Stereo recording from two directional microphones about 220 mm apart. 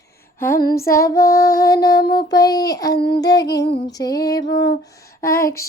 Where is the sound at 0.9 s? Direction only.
15° left (ahead or behind).